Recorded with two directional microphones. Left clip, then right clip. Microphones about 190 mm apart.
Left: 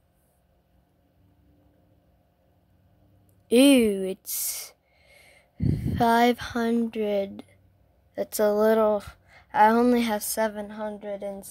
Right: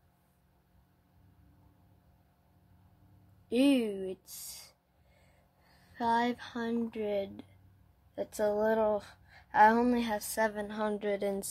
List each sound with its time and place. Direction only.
3.4 s speech: 40° left (ahead or behind)
5.9 s a woman's voice: 35° left (ahead or behind); by 10.7 s 15° left (ahead or behind)
10.7 s a woman's voice: 5° right (ahead or behind)